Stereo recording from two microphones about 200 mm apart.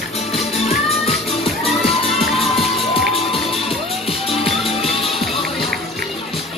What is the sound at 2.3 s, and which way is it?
Music, 30° left (ahead or behind).